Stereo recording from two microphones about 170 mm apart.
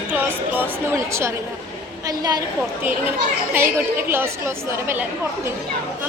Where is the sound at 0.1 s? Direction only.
10° right (ahead or behind).